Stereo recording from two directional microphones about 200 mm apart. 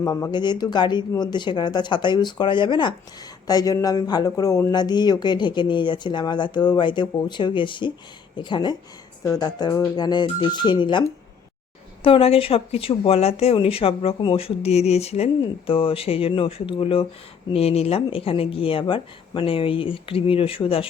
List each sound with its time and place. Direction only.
0.0 s speech: 15° left (ahead or behind)
12.0 s speech: 30° left (ahead or behind)